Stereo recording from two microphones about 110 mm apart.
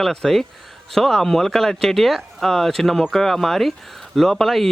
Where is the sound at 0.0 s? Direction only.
5° left (ahead or behind).